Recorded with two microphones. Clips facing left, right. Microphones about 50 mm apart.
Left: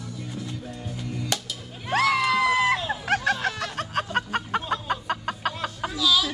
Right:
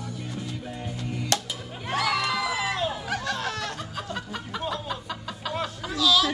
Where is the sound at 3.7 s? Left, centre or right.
Left.